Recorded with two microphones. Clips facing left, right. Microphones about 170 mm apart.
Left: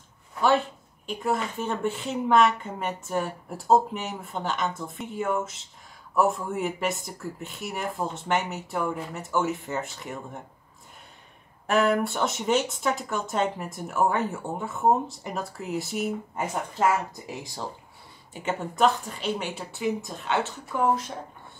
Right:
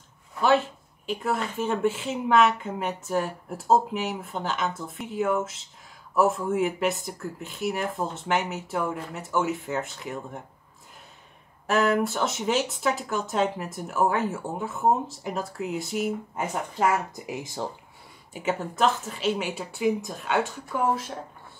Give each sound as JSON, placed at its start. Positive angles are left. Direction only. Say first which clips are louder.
{"t": 0.4, "sound": "a sound", "louder": "right 1 dB", "side_deg": 0}
{"t": 1.3, "sound": "speech", "louder": "right 1 dB", "side_deg": -5}
{"t": 11.6, "sound": "speech", "louder": "even", "side_deg": 0}
{"t": 17.3, "sound": "speech", "louder": "right 7 dB", "side_deg": -15}
{"t": 18.3, "sound": "speech", "louder": "right 2 dB", "side_deg": -5}